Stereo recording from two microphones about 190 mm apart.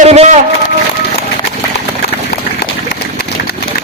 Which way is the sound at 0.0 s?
35° right (ahead or behind).